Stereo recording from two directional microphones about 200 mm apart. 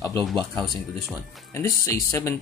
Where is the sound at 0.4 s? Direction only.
Centre (ahead or behind).